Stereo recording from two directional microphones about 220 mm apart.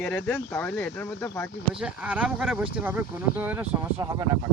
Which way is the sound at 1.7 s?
5° right (ahead or behind).